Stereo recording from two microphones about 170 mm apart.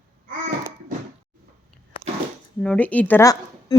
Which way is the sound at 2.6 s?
10° left (ahead or behind).